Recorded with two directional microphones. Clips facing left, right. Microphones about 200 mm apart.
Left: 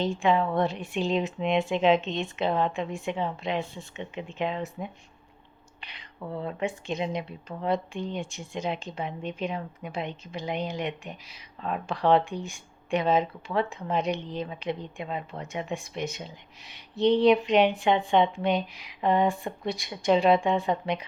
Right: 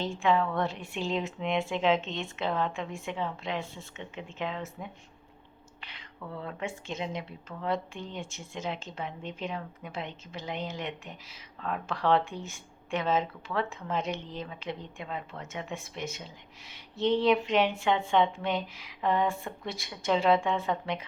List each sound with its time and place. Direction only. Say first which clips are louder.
0.0 s speech: left 3 dB; 15° left (ahead or behind)